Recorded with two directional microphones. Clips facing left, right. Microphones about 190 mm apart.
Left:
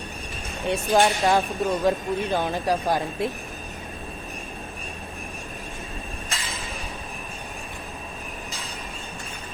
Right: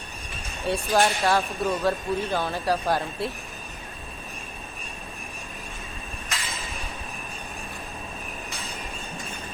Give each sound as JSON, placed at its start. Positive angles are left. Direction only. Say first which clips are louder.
{"t": 0.7, "sound": "speech", "louder": "left 2 dB", "side_deg": 20}